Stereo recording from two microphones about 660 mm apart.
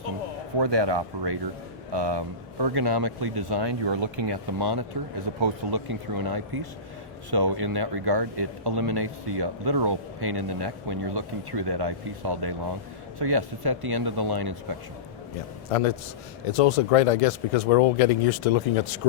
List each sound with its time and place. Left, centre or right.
0.6 s speech: right
16.5 s speech: left